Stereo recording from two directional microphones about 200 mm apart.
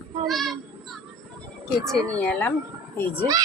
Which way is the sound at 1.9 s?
5° left (ahead or behind).